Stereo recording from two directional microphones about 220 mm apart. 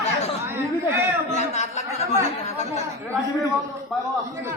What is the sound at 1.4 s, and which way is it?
Speech, 30° left (ahead or behind).